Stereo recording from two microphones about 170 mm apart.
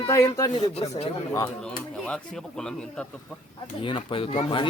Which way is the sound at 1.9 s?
5° left (ahead or behind).